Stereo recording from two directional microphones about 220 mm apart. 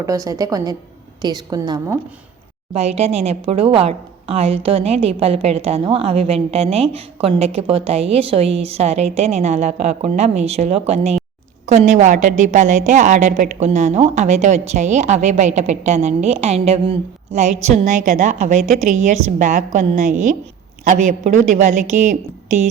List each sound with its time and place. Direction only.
0.0 s a woman's voice: 15° right (ahead or behind)
2.7 s a woman's voice: 30° right (ahead or behind)